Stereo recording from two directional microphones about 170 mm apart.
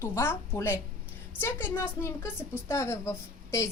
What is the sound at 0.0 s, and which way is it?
A woman's voice, 15° left (ahead or behind).